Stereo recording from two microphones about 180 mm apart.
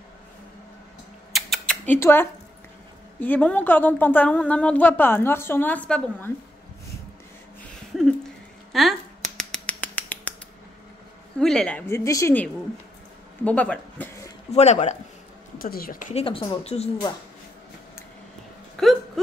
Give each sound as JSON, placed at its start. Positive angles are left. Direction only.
{"t": 1.3, "sound": "rodents", "side_deg": 5}
{"t": 3.2, "sound": "a woman's voice", "side_deg": 10}
{"t": 7.9, "sound": "a sound", "side_deg": 0}
{"t": 8.7, "sound": "speech", "side_deg": 0}
{"t": 9.4, "sound": "finger snapping", "side_deg": 5}
{"t": 11.3, "sound": "a woman's voice", "side_deg": 5}
{"t": 14.5, "sound": "speech", "side_deg": 40}
{"t": 15.6, "sound": "speech", "side_deg": 55}
{"t": 18.8, "sound": "a sound", "side_deg": 5}